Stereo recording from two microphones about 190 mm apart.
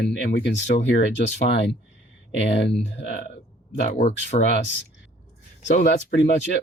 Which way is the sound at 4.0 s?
35° left (ahead or behind).